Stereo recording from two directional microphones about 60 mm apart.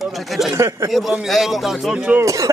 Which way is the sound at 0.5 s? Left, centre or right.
Right.